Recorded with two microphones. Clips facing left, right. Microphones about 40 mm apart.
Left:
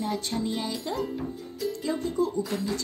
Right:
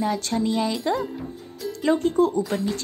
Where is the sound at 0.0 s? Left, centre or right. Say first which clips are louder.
Right 6 dB; right.